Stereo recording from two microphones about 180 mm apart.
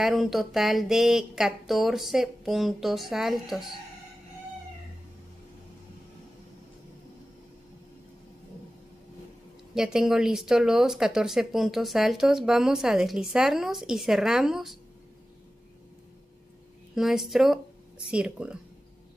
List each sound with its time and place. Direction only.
0.0 s speech: centre (ahead or behind)
9.8 s speech: 5° right (ahead or behind)
16.9 s speech: centre (ahead or behind)